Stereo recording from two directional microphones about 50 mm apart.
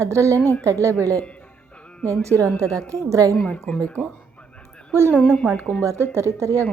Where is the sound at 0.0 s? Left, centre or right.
Right.